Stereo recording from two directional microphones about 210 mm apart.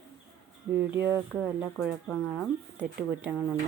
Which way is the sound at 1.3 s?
Centre (ahead or behind).